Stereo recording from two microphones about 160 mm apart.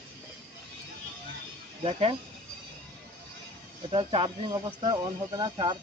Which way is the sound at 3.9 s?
35° right (ahead or behind).